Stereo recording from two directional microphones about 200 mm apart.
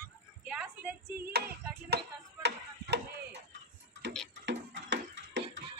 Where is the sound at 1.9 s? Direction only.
55° right (ahead or behind).